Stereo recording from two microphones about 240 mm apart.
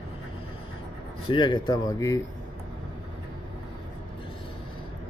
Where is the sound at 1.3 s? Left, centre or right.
Centre.